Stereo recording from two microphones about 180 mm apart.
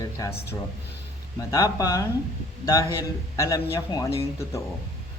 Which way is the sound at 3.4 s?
15° left (ahead or behind).